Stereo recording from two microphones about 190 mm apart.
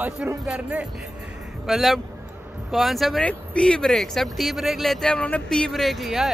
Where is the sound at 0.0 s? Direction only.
10° right (ahead or behind).